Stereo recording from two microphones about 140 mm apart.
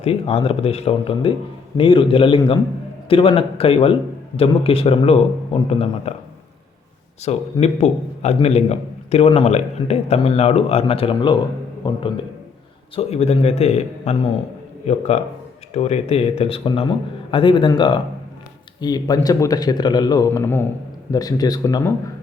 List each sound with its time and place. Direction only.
0.0 s a man's voice: 45° left (ahead or behind)
7.3 s a man's voice: 50° left (ahead or behind)
13.0 s a man's voice: 50° left (ahead or behind); by 21.9 s 25° left (ahead or behind)